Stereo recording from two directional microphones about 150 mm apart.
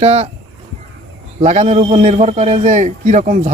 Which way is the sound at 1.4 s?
50° right (ahead or behind).